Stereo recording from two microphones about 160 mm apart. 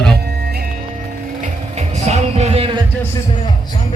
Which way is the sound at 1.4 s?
45° right (ahead or behind).